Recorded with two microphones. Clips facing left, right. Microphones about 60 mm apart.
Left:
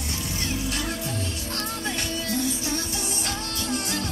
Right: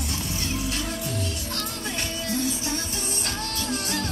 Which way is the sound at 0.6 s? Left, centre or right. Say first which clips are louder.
Even; left.